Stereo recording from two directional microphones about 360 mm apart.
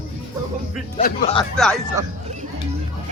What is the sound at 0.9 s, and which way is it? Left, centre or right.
Speech, centre.